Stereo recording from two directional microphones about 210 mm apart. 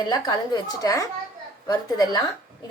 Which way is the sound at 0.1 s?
20° left (ahead or behind).